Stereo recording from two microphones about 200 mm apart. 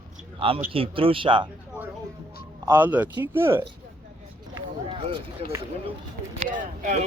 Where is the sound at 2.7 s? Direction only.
10° right (ahead or behind).